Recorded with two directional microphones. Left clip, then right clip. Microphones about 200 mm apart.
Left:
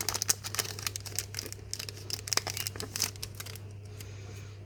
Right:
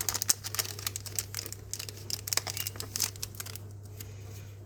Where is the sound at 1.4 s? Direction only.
25° left (ahead or behind).